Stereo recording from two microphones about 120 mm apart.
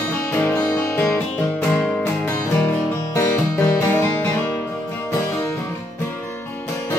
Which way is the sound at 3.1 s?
20° left (ahead or behind).